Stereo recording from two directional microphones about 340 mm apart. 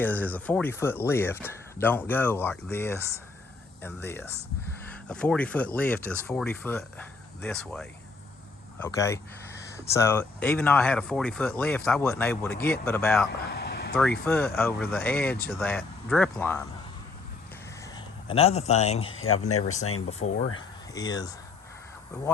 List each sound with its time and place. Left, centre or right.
0.0 s speech: centre
13.5 s vehicle: left
14.3 s speech: centre
17.9 s a man's voice: centre
19.0 s speech: left
20.6 s speech: centre